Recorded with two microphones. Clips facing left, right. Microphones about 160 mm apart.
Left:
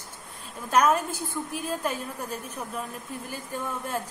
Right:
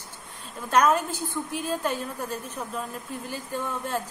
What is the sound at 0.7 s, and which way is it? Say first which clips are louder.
A woman's voice: right 1 dB; 10° left (ahead or behind).